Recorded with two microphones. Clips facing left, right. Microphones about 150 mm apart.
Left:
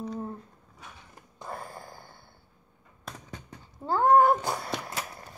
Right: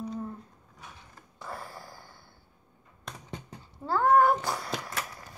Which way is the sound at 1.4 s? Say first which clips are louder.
Left 2 dB; 20° left (ahead or behind).